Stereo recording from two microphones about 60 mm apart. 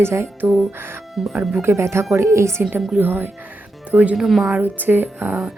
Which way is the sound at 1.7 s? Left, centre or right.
Right.